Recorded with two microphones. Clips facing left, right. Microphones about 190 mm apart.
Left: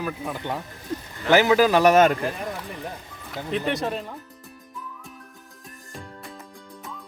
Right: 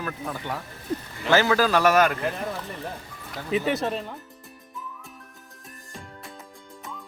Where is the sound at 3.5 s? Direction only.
5° right (ahead or behind).